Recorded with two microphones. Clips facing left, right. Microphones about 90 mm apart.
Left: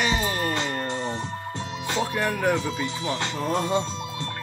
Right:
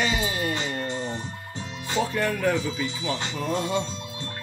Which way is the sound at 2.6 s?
50° left (ahead or behind).